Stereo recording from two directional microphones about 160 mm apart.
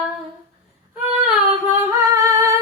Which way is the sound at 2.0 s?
20° right (ahead or behind).